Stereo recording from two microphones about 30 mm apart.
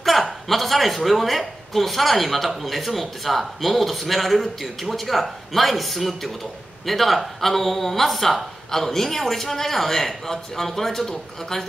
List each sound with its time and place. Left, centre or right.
0.0 s a woman's voice: centre